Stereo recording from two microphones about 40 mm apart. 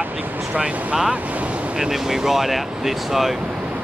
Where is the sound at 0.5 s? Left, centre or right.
Right.